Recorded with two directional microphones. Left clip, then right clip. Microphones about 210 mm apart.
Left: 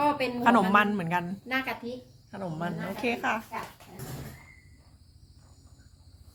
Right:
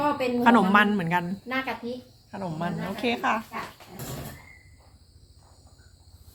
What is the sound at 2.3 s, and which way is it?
A woman's voice, 5° left (ahead or behind).